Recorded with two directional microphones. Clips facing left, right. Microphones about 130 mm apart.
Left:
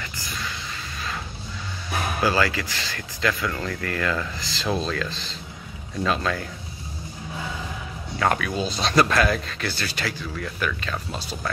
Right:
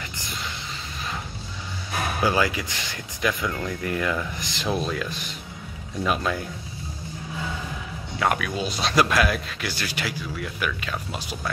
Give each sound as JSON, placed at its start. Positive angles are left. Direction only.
{"t": 0.0, "sound": "vehicle", "side_deg": -20}
{"t": 2.2, "sound": "speech", "side_deg": -15}
{"t": 8.2, "sound": "speech", "side_deg": -10}